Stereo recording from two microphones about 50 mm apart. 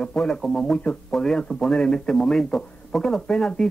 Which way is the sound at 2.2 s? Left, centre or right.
Centre.